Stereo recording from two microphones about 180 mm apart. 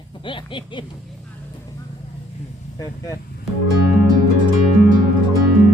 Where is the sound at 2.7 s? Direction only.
20° left (ahead or behind).